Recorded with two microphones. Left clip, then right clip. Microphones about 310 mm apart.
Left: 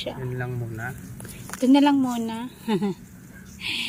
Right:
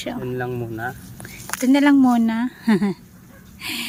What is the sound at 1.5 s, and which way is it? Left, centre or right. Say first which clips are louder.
Speech: right 2 dB; centre.